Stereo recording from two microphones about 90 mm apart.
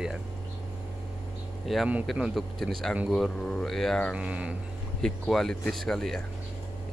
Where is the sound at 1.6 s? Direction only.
Centre (ahead or behind).